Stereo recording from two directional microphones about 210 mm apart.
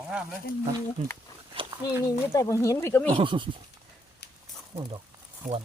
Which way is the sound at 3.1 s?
25° right (ahead or behind).